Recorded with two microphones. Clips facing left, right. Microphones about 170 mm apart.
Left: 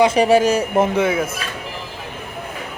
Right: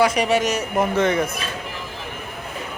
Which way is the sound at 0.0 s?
30° left (ahead or behind).